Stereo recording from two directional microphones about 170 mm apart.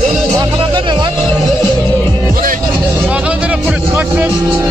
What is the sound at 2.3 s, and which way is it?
Music, 55° right (ahead or behind).